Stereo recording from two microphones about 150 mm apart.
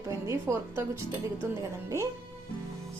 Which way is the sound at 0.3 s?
20° right (ahead or behind).